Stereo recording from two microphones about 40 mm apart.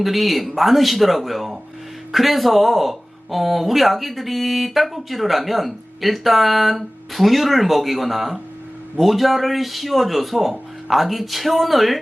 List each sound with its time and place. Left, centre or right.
0.0 s speech: centre